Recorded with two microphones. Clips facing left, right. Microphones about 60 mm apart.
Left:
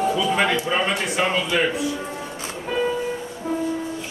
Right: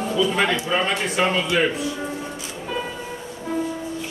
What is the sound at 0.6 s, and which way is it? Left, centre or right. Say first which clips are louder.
A man's voice: even; centre.